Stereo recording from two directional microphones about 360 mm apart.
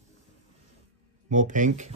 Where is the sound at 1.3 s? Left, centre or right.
Right.